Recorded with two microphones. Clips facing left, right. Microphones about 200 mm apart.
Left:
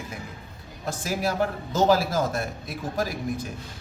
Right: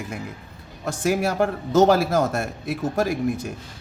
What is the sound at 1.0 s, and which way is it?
A man's voice, 55° right (ahead or behind).